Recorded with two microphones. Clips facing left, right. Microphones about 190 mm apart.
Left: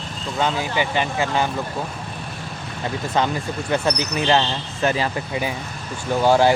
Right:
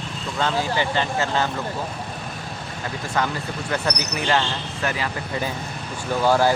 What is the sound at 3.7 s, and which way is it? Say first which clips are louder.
Speech: left 4 dB; 25° left (ahead or behind).